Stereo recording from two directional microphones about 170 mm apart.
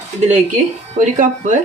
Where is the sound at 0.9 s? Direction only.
45° right (ahead or behind).